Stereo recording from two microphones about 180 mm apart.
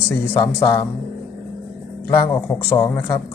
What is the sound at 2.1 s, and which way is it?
Speech, 15° left (ahead or behind).